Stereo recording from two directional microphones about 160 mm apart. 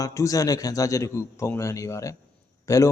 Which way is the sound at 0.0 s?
20° left (ahead or behind).